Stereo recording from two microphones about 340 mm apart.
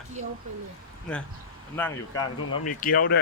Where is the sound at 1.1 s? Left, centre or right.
Centre.